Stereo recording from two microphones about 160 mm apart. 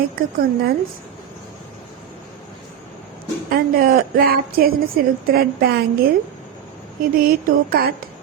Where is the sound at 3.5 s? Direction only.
65° right (ahead or behind).